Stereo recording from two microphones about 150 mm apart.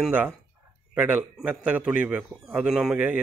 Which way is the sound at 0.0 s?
10° right (ahead or behind).